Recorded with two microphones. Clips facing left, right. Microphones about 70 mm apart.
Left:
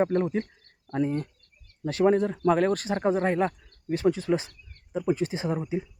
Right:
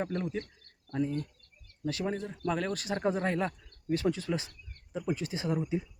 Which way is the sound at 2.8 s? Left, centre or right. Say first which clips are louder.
Left 6 dB; left.